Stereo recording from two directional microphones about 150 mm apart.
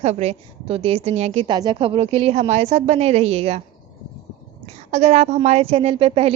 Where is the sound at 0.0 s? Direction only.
45° right (ahead or behind).